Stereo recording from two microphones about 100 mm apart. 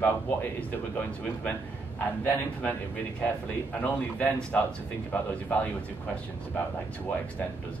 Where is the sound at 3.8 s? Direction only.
15° left (ahead or behind).